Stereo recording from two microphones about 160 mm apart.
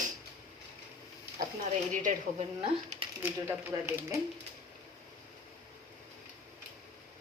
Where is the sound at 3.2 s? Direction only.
15° right (ahead or behind).